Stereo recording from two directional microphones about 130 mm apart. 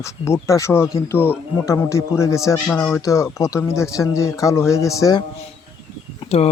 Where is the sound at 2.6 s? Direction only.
10° left (ahead or behind).